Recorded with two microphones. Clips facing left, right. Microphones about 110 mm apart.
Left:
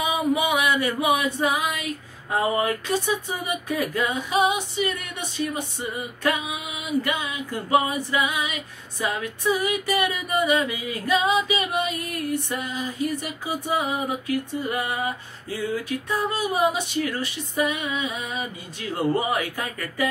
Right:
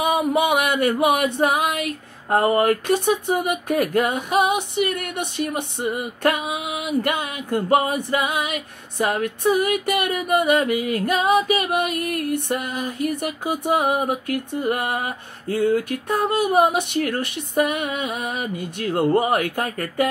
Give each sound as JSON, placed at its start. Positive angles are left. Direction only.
{"t": 0.0, "sound": "female singing", "side_deg": -55}